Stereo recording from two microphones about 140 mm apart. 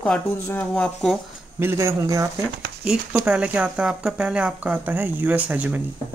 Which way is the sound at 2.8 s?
5° right (ahead or behind).